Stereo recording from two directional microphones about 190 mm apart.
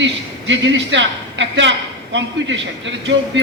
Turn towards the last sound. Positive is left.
turn(degrees=-75)  # may be behind; listen again after turning